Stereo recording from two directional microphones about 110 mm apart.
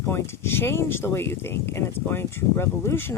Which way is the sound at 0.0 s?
25° left (ahead or behind).